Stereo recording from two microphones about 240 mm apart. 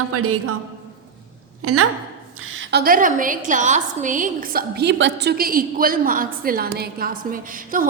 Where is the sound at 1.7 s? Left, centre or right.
Right.